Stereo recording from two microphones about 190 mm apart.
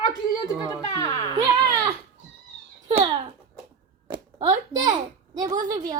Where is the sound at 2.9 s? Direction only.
30° right (ahead or behind).